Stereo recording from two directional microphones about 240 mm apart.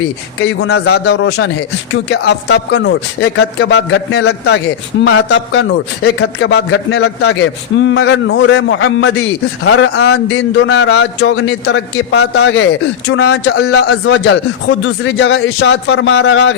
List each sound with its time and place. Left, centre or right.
0.3 s a man's voice: left
13.8 s a man's voice: left